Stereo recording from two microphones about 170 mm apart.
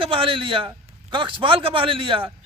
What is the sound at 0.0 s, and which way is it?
A man's voice, 30° right (ahead or behind).